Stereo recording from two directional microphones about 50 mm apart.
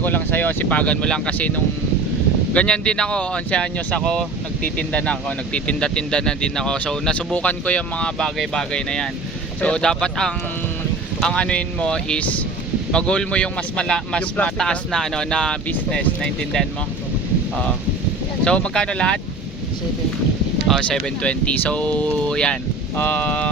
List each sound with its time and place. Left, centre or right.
0.0 s speech: left
1.0 s speech: centre
1.4 s speech: left
2.5 s speech: left
4.6 s speech: left
7.3 s speech: left
14.2 s speech: left
14.6 s speech: centre
18.4 s speech: centre
20.8 s speech: centre
21.2 s speech: left
22.3 s speech: centre